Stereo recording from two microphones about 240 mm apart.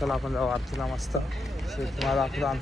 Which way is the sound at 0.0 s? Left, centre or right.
Centre.